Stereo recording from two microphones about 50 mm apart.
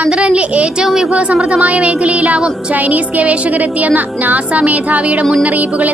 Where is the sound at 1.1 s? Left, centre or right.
Right.